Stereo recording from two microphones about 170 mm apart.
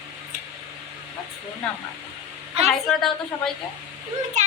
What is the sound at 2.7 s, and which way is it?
Speech, centre (ahead or behind).